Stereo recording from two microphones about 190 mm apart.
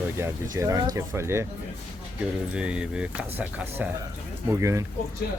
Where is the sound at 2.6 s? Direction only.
5° right (ahead or behind).